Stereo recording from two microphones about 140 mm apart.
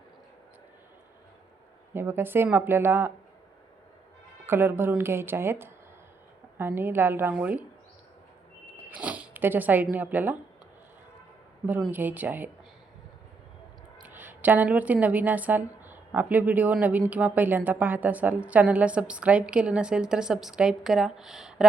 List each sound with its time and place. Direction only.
1.9 s a woman's voice: 15° right (ahead or behind)
4.4 s a woman's voice: 15° right (ahead or behind)
8.9 s zipper: 10° right (ahead or behind)
9.9 s a woman's voice: 15° right (ahead or behind)
11.9 s a woman's voice: 15° right (ahead or behind)
14.1 s a woman's voice: 15° right (ahead or behind)